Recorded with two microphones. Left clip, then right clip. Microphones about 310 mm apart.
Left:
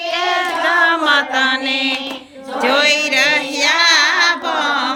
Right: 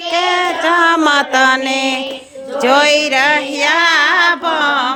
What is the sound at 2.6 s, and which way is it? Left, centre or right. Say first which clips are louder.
Child singing: right 3 dB; centre.